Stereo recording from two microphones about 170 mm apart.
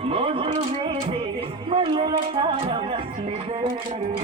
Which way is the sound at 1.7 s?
35° right (ahead or behind).